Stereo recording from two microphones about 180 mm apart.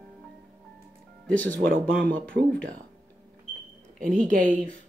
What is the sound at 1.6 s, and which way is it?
Speech, 50° right (ahead or behind).